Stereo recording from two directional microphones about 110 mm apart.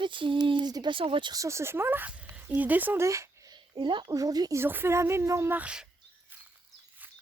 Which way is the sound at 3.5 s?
45° right (ahead or behind).